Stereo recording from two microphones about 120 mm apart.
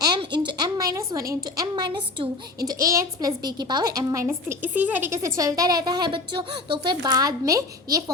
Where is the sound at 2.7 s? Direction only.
30° right (ahead or behind).